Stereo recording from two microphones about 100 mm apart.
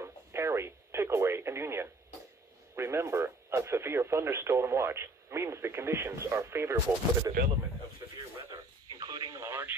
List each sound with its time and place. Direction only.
0.0 s radio: 25° right (ahead or behind)
2.7 s speech: 25° right (ahead or behind)
8.5 s radio: 40° right (ahead or behind); by 9.8 s 20° right (ahead or behind)